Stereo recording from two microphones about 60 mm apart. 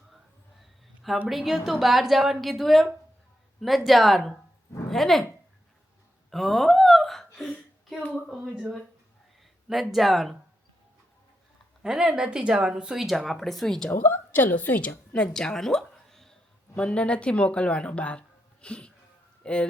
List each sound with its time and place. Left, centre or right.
1.3 s a woman's voice: centre
6.3 s a sound: centre
7.3 s speech: centre
8.5 s a woman's voice: centre
9.9 s a woman's voice: centre
11.8 s a woman's voice: centre
13.9 s a woman's voice: left
15.3 s speech: centre
16.0 s a sound: centre
16.7 s speech: centre